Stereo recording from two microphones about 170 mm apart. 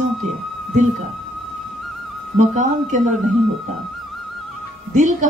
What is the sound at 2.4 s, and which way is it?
Speech, 50° right (ahead or behind).